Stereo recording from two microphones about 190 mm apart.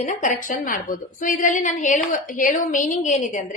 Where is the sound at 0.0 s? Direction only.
40° left (ahead or behind).